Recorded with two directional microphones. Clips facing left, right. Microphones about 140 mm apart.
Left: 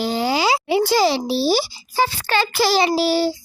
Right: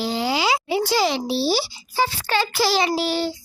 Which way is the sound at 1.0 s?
35° left (ahead or behind).